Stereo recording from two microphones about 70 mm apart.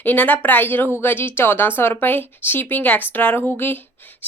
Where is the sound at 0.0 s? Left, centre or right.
Left.